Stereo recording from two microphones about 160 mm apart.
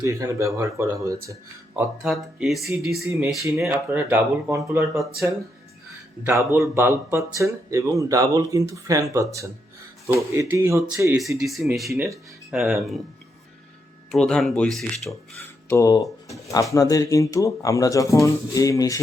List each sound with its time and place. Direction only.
0.0 s speech: 20° right (ahead or behind)
2.0 s speech: centre (ahead or behind)
3.4 s speech: 15° right (ahead or behind)
11.3 s speech: centre (ahead or behind)
14.1 s speech: 5° left (ahead or behind)
15.7 s speech: 20° left (ahead or behind)